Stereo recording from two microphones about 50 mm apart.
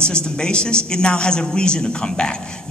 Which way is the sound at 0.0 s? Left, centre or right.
Centre.